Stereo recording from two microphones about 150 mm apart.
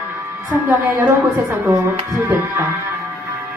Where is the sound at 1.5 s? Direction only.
15° right (ahead or behind).